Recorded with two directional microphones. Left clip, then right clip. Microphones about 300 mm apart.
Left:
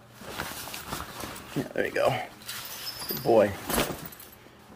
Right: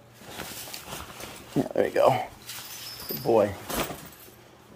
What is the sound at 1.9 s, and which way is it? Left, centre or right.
Speech, centre.